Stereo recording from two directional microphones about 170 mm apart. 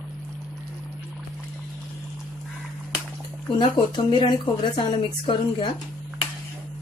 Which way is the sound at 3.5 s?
30° left (ahead or behind).